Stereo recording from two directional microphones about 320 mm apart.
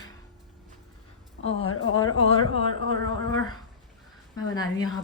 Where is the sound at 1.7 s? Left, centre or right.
Left.